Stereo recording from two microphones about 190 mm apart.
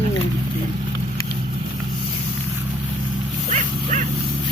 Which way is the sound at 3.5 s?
40° right (ahead or behind).